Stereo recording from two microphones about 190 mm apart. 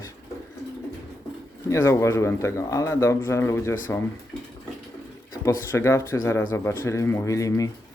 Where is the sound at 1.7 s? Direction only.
15° left (ahead or behind).